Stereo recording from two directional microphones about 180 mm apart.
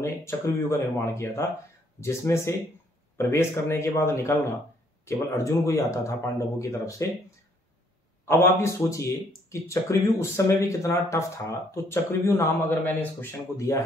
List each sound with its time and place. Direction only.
0.0 s speech: 15° left (ahead or behind)